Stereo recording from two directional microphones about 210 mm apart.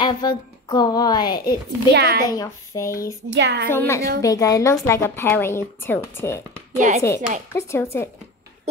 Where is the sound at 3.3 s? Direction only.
55° right (ahead or behind).